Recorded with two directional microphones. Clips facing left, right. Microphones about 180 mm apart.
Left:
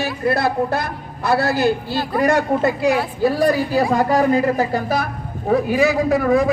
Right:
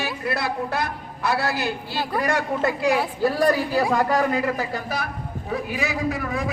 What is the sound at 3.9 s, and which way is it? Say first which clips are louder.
Speech: left 7 dB; 30° left (ahead or behind).